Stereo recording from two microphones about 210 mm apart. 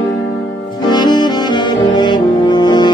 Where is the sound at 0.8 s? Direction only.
20° left (ahead or behind).